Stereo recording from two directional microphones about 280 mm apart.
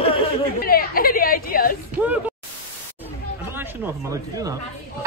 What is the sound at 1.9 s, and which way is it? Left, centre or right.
Speech, centre.